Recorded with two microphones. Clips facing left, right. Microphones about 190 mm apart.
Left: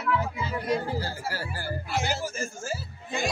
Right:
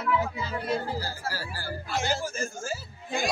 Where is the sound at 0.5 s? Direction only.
15° left (ahead or behind).